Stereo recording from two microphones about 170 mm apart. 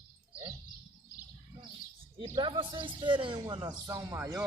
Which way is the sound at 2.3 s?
25° right (ahead or behind).